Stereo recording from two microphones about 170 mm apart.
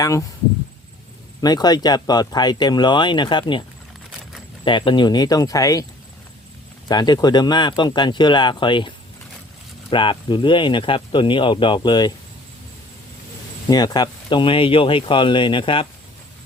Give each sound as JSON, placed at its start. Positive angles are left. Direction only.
{"t": 0.0, "sound": "speech", "side_deg": 20}
{"t": 1.4, "sound": "speech", "side_deg": 25}
{"t": 4.6, "sound": "speech", "side_deg": 30}
{"t": 6.8, "sound": "speech", "side_deg": 25}
{"t": 9.9, "sound": "speech", "side_deg": 30}
{"t": 13.7, "sound": "speech", "side_deg": 25}